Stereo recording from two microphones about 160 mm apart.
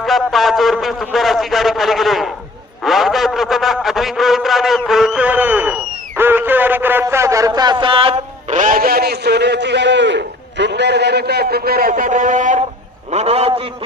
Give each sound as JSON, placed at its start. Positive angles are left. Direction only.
{"t": 0.0, "sound": "a man's voice", "side_deg": 0}
{"t": 13.1, "sound": "a man's voice", "side_deg": -40}